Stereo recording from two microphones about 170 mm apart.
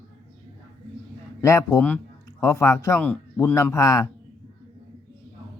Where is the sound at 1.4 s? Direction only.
20° left (ahead or behind).